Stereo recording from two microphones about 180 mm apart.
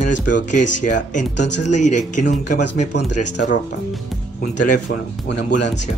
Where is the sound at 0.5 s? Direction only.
45° left (ahead or behind).